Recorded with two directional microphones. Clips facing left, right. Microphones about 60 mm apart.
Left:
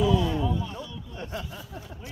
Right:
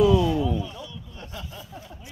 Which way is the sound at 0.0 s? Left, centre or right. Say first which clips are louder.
Right 5 dB; right.